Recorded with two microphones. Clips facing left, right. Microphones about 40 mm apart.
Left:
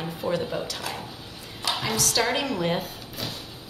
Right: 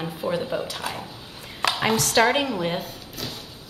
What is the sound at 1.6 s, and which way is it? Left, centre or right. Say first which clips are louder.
Speech: right 5 dB; right.